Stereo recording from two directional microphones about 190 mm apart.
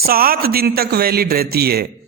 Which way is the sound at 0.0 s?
50° right (ahead or behind).